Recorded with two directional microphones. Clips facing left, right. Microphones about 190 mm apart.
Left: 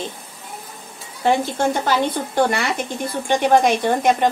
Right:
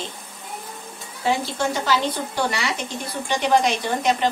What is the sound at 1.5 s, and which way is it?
A woman's voice, 50° left (ahead or behind).